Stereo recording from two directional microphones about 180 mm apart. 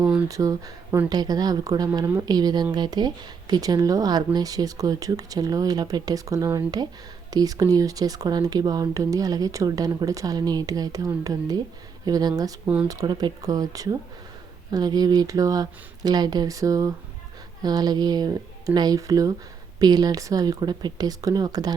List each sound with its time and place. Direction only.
0.3 s speech: 20° right (ahead or behind)
12.6 s speech: 5° right (ahead or behind)
12.9 s speech: 20° right (ahead or behind)